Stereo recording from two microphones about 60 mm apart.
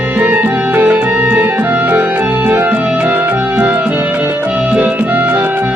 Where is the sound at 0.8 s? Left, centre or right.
Right.